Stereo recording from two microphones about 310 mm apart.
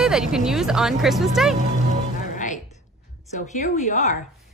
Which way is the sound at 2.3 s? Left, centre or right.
Left.